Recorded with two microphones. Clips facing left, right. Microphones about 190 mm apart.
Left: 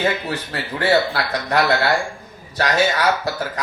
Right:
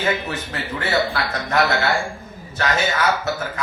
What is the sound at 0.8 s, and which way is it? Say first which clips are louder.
Speech: left 4 dB; 35° left (ahead or behind).